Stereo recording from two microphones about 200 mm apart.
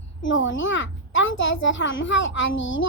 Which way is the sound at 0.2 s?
70° left (ahead or behind).